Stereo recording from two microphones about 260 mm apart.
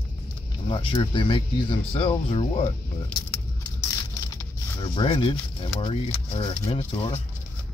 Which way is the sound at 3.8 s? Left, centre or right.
Centre.